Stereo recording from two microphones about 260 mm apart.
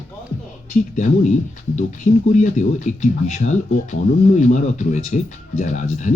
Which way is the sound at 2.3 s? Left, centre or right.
Left.